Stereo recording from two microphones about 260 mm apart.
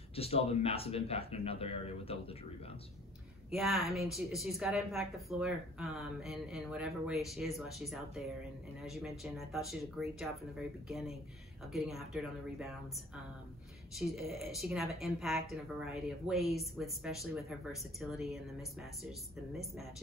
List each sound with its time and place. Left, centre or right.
0.1 s speech: left
3.4 s speech: centre